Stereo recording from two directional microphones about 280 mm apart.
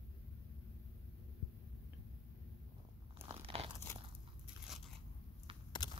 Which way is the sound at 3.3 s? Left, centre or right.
Right.